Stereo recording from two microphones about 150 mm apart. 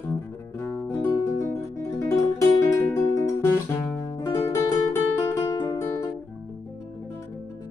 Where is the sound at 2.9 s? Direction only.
15° left (ahead or behind).